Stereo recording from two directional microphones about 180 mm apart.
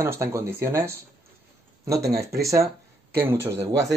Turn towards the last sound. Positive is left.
turn(degrees=-15)  # may be behind; listen again after turning